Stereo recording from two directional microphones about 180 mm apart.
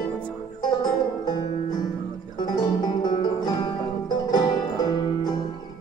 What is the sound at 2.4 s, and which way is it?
Music, 25° left (ahead or behind).